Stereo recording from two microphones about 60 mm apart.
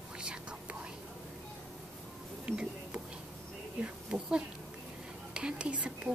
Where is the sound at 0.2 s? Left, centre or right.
Centre.